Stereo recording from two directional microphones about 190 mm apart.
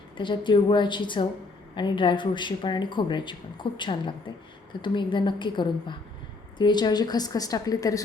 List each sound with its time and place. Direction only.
0.2 s speech: 25° left (ahead or behind)